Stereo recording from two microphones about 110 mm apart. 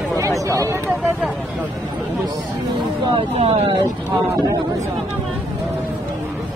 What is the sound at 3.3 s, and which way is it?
Speech, 60° right (ahead or behind).